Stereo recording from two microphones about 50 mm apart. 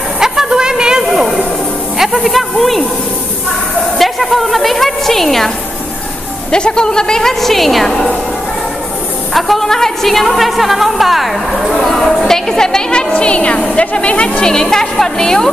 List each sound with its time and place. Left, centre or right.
0.2 s a sound: centre
1.1 s a sound: centre
2.2 s a woman's voice: centre
4.0 s a woman's voice: centre
6.5 s a woman's voice: centre
9.3 s a woman's voice: centre; by 14.4 s left
14.4 s a woman's voice: centre